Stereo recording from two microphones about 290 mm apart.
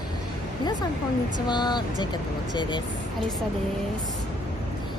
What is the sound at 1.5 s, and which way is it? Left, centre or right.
Speech, centre.